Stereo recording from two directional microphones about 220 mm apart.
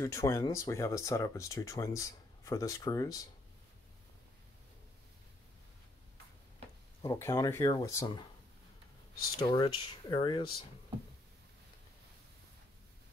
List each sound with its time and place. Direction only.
0.0 s speech: 15° left (ahead or behind)
7.0 s speech: 15° left (ahead or behind)
9.4 s speech: 20° left (ahead or behind)